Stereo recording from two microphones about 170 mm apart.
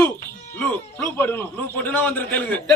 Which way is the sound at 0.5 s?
10° left (ahead or behind).